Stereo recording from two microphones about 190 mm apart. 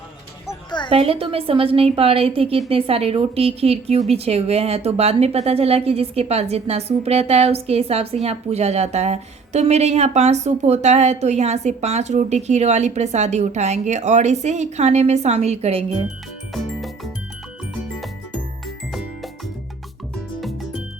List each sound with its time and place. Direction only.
0.4 s music: 25° left (ahead or behind)
0.9 s a woman's voice: 30° right (ahead or behind)
16.5 s music: centre (ahead or behind)
18.9 s music: centre (ahead or behind)
20.4 s music: centre (ahead or behind)